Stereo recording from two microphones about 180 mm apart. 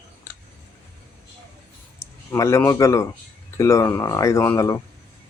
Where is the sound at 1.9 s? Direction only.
15° left (ahead or behind).